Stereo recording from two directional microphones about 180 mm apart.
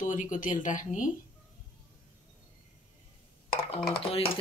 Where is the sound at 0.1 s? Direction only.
45° left (ahead or behind).